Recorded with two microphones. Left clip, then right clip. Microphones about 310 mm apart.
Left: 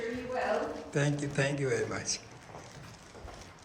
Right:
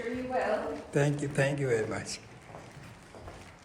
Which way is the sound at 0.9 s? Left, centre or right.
Centre.